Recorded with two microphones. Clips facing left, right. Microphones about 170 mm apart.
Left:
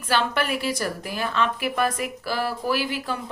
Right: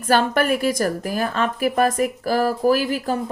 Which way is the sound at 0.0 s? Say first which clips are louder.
Right 6 dB; 45° right (ahead or behind).